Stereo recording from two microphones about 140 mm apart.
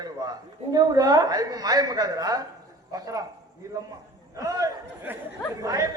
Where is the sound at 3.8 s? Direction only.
25° right (ahead or behind).